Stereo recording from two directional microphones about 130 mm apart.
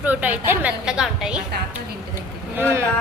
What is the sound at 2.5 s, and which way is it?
Speech, 15° right (ahead or behind).